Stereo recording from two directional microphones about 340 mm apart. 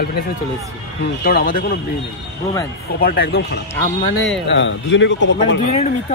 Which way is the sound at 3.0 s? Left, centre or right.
Left.